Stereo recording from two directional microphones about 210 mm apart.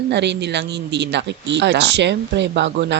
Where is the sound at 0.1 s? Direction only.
55° right (ahead or behind).